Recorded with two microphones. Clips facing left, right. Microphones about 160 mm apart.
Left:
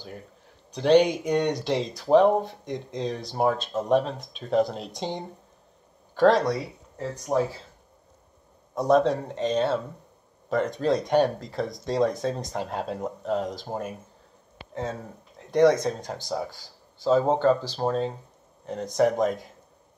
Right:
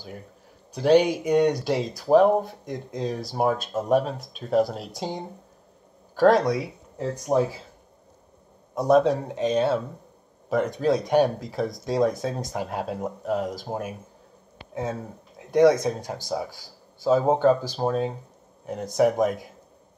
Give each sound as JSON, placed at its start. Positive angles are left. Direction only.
{"t": 0.7, "sound": "speech", "side_deg": -10}
{"t": 7.3, "sound": "speech", "side_deg": -25}
{"t": 8.7, "sound": "speech", "side_deg": -5}